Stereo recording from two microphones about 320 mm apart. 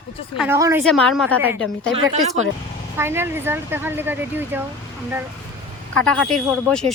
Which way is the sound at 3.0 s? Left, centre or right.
Centre.